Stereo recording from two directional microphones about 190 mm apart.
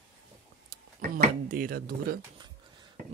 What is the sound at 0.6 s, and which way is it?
Speech, 45° right (ahead or behind).